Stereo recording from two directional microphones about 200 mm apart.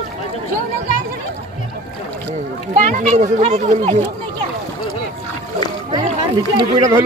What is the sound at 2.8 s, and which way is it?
A child's voice, 40° right (ahead or behind).